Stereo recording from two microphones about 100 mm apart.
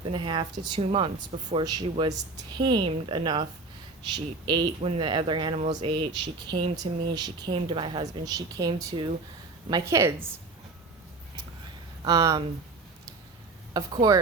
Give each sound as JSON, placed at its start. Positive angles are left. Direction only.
{"t": 0.0, "sound": "speech", "side_deg": -50}
{"t": 0.8, "sound": "speech", "side_deg": -65}
{"t": 1.6, "sound": "speech", "side_deg": -40}
{"t": 4.8, "sound": "speech", "side_deg": -75}
{"t": 5.0, "sound": "speech", "side_deg": -55}
{"t": 8.2, "sound": "speech", "side_deg": -40}
{"t": 9.8, "sound": "a woman's voice", "side_deg": -25}
{"t": 12.0, "sound": "speech", "side_deg": -40}
{"t": 13.7, "sound": "speech", "side_deg": -40}